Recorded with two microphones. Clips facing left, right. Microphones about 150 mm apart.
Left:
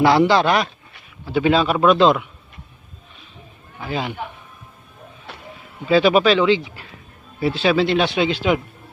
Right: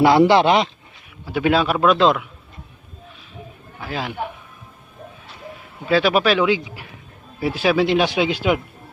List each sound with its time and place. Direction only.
0.0 s speech: 20° right (ahead or behind)
1.2 s a man's voice: 5° right (ahead or behind)
3.8 s a man's voice: centre (ahead or behind)
5.9 s a man's voice: centre (ahead or behind)